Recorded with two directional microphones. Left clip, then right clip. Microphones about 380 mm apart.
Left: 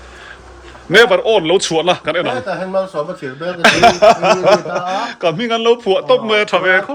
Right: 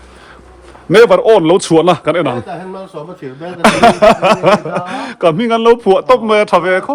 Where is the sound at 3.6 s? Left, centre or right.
Centre.